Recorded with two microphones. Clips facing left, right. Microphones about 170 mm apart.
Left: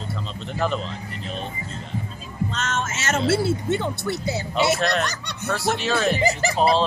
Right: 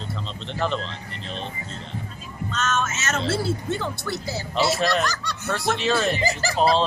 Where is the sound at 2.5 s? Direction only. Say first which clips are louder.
Right 5 dB; 30° left (ahead or behind).